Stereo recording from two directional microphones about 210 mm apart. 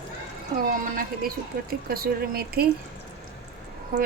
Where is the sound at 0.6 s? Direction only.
40° right (ahead or behind).